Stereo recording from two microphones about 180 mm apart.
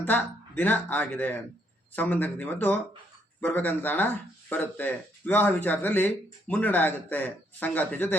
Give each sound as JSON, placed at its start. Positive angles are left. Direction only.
{"t": 0.0, "sound": "speech", "side_deg": 10}